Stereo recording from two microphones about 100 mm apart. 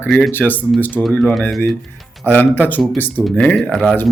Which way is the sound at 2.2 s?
15° left (ahead or behind).